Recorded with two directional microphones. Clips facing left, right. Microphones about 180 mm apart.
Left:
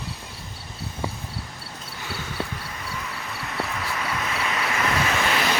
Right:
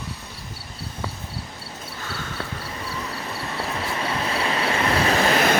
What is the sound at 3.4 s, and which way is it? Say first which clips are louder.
Vehicle: even; 30° right (ahead or behind).